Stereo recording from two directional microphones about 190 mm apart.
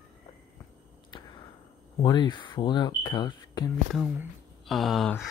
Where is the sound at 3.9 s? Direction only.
5° right (ahead or behind).